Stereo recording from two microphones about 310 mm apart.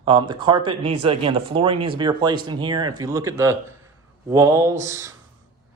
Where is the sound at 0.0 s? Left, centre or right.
Centre.